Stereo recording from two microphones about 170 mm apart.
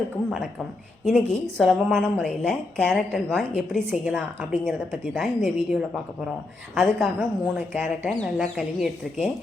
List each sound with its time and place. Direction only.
1.0 s a woman's voice: 5° left (ahead or behind)